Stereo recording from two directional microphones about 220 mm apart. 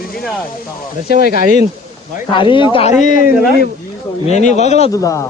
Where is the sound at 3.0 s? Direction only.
35° left (ahead or behind).